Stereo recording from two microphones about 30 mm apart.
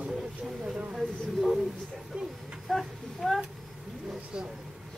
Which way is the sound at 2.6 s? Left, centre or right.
Centre.